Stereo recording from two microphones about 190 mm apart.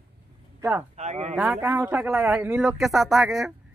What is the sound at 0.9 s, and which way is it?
Speech, 35° right (ahead or behind).